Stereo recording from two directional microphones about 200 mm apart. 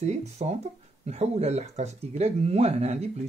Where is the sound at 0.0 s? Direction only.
35° right (ahead or behind).